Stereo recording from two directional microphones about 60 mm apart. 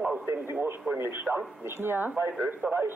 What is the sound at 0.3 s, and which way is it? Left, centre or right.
A man's voice, right.